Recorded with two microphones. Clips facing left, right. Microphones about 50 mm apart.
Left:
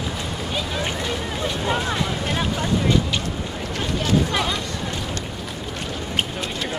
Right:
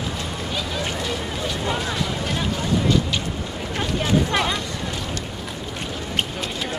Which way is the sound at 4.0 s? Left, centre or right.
Right.